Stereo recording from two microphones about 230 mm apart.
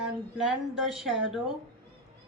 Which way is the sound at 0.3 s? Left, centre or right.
Centre.